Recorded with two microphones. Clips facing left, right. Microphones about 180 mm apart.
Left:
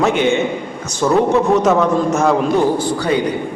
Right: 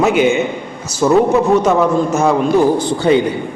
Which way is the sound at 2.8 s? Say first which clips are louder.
Right 4 dB; 25° right (ahead or behind).